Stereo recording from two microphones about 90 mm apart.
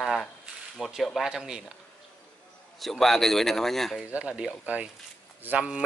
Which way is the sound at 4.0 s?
15° right (ahead or behind).